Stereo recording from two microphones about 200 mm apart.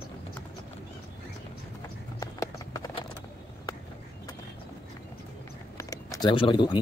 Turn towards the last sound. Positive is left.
turn(degrees=25)  # may be behind; listen again after turning